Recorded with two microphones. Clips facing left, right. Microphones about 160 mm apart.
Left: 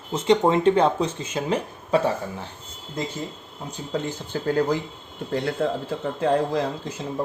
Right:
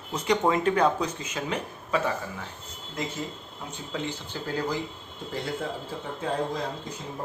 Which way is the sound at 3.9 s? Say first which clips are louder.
Left 5 dB; 40° left (ahead or behind).